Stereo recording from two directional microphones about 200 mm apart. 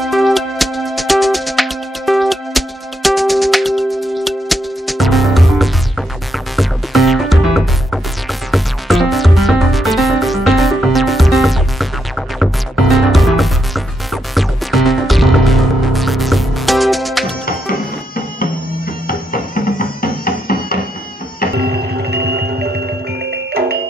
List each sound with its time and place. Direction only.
0.0 s music: centre (ahead or behind)
17.5 s music: 45° left (ahead or behind)
21.5 s music: 55° right (ahead or behind)